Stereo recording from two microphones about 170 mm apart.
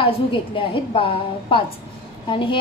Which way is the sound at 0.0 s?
30° left (ahead or behind).